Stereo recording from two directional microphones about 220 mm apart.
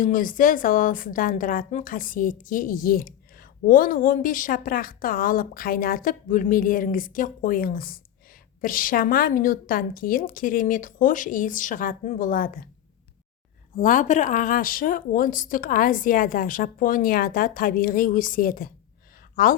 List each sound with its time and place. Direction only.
0.0 s a woman's voice: 35° left (ahead or behind)
13.7 s a woman's voice: 35° left (ahead or behind)